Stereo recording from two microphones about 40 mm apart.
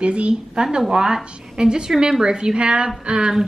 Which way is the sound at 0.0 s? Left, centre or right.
Right.